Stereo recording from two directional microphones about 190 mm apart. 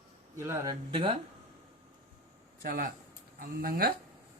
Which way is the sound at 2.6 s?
50° right (ahead or behind).